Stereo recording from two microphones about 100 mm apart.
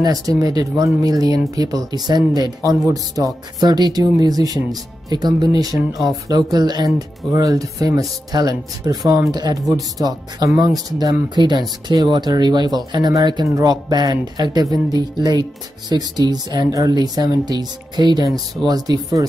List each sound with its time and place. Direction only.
0.0 s speech: 40° right (ahead or behind)